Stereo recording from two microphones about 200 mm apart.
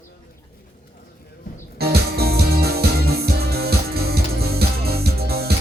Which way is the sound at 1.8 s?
50° right (ahead or behind).